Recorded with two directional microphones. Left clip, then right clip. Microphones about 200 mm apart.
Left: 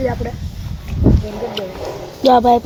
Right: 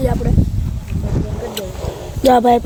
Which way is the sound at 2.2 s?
5° right (ahead or behind).